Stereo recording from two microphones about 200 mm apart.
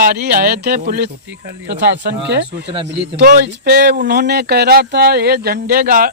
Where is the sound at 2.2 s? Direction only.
60° right (ahead or behind).